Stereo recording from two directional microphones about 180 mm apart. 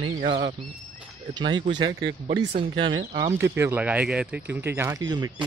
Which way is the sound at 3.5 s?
10° right (ahead or behind).